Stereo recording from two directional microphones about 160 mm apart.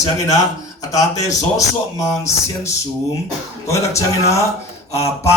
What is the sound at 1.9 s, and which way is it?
Speech, 20° left (ahead or behind).